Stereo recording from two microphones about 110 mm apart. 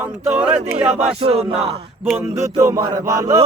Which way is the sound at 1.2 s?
65° right (ahead or behind).